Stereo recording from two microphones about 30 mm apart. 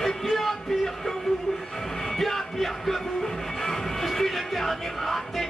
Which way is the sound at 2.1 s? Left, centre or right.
Centre.